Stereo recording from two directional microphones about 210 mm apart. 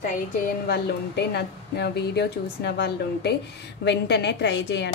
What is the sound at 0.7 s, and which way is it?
Speech, 50° left (ahead or behind).